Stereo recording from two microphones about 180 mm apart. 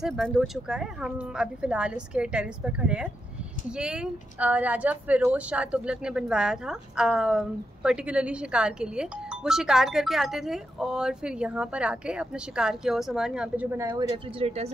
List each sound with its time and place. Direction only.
0.0 s a woman's voice: centre (ahead or behind)
14.1 s speech: 35° right (ahead or behind)